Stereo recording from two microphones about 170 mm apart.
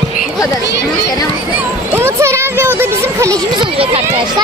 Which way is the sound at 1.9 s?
15° right (ahead or behind).